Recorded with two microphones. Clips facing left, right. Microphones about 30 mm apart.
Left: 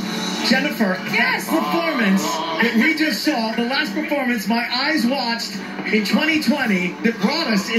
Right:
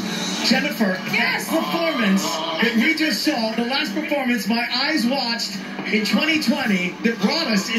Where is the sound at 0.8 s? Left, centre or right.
Centre.